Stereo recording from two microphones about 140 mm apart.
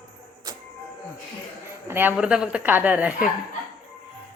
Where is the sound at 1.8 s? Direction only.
15° right (ahead or behind).